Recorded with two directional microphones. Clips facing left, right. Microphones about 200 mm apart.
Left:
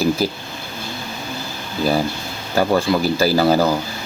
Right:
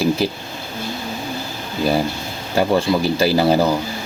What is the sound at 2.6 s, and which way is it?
Speech, 25° right (ahead or behind).